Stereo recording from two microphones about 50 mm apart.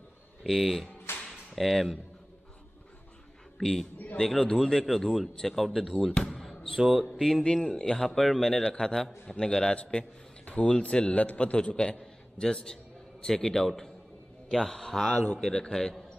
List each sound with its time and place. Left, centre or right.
0.4 s speech: centre
1.1 s a sound: left
1.5 s speech: centre
3.5 s a man's voice: centre
4.8 s speech: centre
6.1 s basketball bounce: centre
6.7 s speech: centre
7.2 s a man's voice: centre
7.4 s a man's voice: centre